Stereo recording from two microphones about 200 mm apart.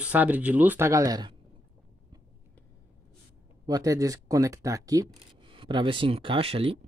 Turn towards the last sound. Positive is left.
turn(degrees=-30)  # may be behind; listen again after turning